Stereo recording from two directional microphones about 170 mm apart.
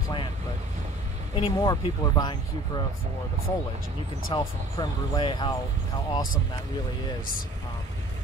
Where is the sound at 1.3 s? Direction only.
30° left (ahead or behind).